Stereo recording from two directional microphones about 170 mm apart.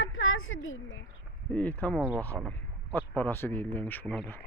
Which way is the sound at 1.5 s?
10° left (ahead or behind).